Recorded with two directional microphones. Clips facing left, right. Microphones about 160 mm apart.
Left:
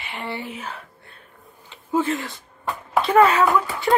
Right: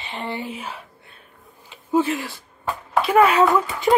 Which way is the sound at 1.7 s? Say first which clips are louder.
Right 2 dB; 20° right (ahead or behind).